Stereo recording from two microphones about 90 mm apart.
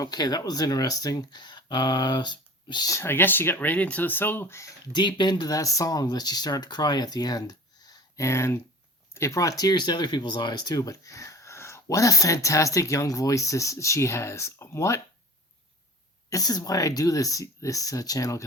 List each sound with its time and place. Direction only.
0.0 s speech: 45° left (ahead or behind)
2.9 s speech: 25° left (ahead or behind)
4.9 s speech: 55° left (ahead or behind); by 15.0 s 30° left (ahead or behind)
16.3 s speech: 45° left (ahead or behind)